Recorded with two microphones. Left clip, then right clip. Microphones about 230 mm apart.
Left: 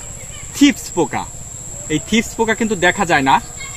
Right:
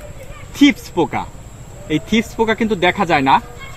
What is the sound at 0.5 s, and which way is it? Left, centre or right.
Speech, centre.